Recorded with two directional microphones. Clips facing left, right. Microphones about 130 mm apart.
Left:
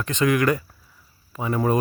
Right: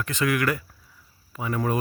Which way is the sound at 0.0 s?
25° left (ahead or behind).